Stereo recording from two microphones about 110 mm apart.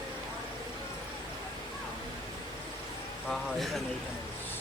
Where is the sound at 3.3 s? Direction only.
Centre (ahead or behind).